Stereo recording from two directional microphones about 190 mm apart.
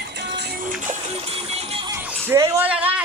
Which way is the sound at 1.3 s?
30° right (ahead or behind).